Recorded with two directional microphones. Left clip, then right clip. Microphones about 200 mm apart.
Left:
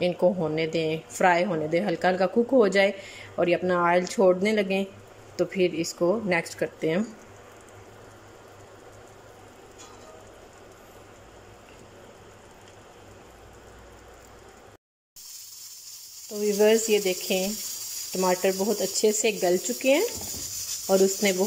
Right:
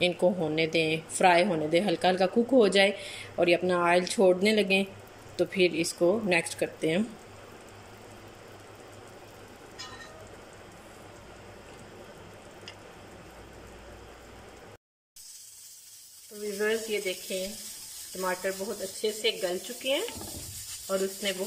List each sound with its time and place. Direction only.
0.0 s a woman's voice: centre (ahead or behind)
16.5 s speech: 25° left (ahead or behind)
21.0 s speech: 30° left (ahead or behind)